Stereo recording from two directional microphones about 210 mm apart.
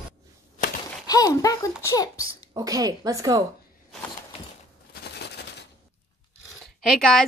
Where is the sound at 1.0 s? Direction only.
15° left (ahead or behind).